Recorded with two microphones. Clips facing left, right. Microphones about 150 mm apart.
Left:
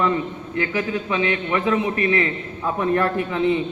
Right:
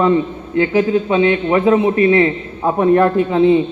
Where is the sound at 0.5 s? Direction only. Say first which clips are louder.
Right 10 dB; 30° right (ahead or behind).